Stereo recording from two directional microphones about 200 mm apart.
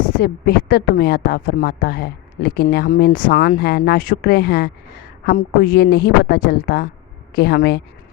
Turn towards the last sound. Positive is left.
turn(degrees=55)  # may be behind; listen again after turning